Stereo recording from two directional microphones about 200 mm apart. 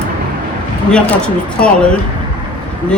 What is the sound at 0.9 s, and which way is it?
Speech, 5° left (ahead or behind).